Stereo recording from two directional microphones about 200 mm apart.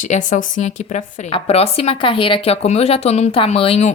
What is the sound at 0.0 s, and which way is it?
A woman's voice, 40° left (ahead or behind).